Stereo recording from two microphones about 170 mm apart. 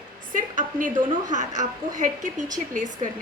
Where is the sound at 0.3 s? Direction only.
50° right (ahead or behind).